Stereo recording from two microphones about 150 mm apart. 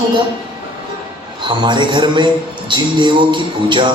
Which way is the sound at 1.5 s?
30° right (ahead or behind).